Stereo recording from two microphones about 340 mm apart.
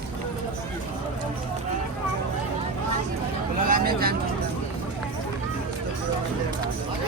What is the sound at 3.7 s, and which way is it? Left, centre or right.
Vehicle, right.